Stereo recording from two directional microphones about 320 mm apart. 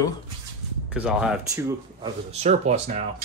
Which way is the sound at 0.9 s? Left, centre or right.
Centre.